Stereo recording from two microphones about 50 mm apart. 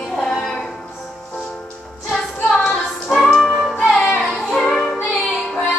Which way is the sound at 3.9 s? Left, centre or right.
Centre.